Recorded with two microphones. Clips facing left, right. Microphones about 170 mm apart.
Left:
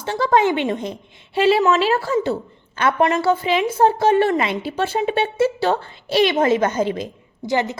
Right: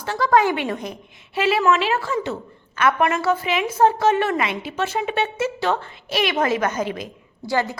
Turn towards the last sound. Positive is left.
turn(degrees=20)  # may be behind; listen again after turning